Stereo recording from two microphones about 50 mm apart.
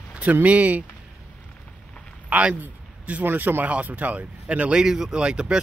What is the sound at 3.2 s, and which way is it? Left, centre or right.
Speech, right.